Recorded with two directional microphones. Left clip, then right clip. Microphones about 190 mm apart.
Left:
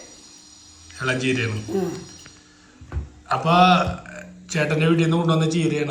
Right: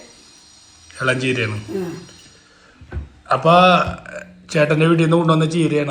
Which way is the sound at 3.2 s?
Centre (ahead or behind).